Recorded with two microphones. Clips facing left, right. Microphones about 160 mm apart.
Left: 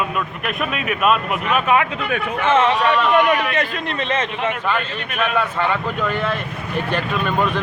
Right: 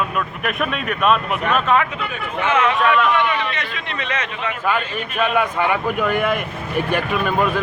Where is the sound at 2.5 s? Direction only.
30° left (ahead or behind).